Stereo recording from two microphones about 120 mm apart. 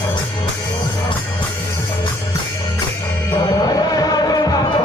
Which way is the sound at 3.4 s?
30° left (ahead or behind).